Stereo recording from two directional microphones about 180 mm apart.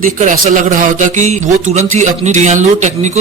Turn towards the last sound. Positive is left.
turn(degrees=-40)  # may be behind; listen again after turning